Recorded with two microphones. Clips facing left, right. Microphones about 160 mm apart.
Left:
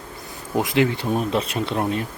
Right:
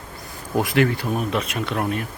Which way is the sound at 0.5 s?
20° left (ahead or behind).